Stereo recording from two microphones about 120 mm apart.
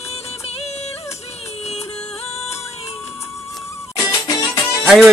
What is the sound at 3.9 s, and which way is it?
Music, 25° left (ahead or behind).